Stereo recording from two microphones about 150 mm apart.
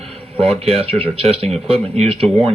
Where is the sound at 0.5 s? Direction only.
45° right (ahead or behind).